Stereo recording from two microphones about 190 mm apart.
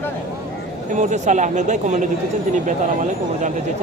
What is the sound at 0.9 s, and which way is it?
Speech, 40° right (ahead or behind).